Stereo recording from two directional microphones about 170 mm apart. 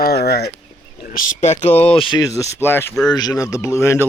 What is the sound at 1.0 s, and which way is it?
Speech, 50° left (ahead or behind).